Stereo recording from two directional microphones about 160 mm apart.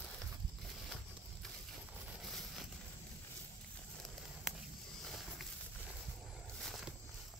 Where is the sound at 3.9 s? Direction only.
Centre (ahead or behind).